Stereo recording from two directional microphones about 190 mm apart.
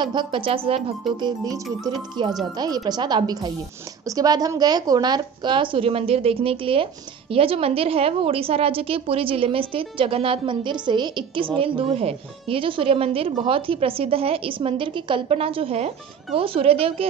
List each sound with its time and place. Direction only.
0.0 s a woman's voice: 25° right (ahead or behind)
1.2 s a woman's voice: 20° right (ahead or behind)